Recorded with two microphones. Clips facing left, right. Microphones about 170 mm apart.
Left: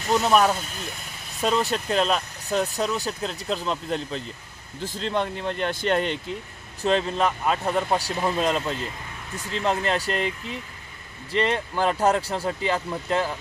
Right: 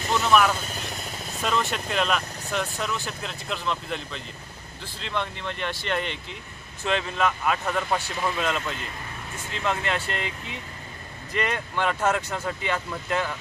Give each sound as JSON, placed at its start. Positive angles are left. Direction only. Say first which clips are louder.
{"t": 0.1, "sound": "speech", "louder": "left 2 dB", "side_deg": 35}